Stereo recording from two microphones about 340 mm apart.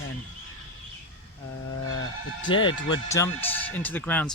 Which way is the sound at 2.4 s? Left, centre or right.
Centre.